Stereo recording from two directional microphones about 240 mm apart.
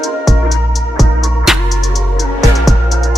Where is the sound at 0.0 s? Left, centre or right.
Centre.